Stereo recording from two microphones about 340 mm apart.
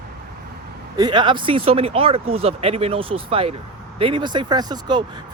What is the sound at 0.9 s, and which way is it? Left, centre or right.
Speech, centre.